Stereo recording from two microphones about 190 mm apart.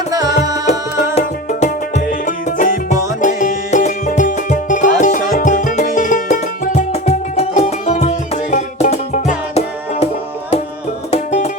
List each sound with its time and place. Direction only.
0.1 s music: 20° right (ahead or behind)
1.1 s music: 40° left (ahead or behind)
11.1 s music: 40° left (ahead or behind)